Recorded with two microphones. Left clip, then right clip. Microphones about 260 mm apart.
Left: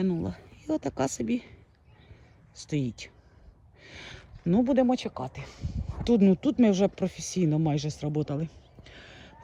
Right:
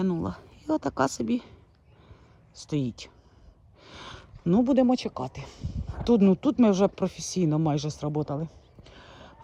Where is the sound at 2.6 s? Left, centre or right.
Centre.